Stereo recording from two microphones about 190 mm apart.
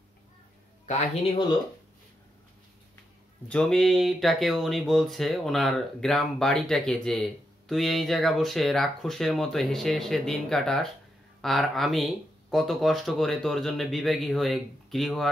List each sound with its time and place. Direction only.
0.8 s a man's voice: 40° left (ahead or behind)
3.4 s speech: 5° left (ahead or behind)